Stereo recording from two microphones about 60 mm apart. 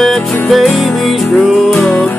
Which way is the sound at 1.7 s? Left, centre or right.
Centre.